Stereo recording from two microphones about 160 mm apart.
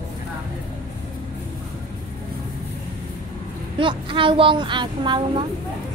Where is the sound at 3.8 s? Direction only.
30° right (ahead or behind).